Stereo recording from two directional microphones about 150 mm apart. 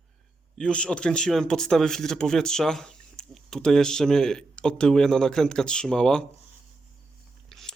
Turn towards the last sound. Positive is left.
turn(degrees=0)  # may be behind; listen again after turning